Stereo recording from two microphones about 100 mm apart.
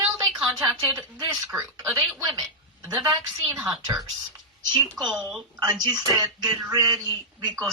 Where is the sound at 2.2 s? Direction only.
40° right (ahead or behind).